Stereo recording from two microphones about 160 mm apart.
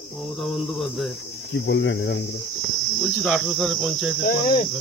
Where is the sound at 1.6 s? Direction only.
90° left.